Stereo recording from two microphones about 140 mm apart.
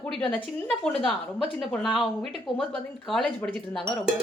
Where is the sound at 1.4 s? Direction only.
Centre (ahead or behind).